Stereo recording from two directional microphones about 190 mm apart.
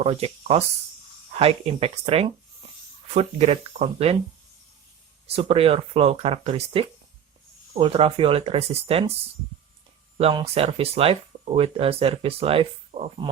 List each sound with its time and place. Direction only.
0.0 s speech: 30° right (ahead or behind)
5.2 s speech: 30° right (ahead or behind)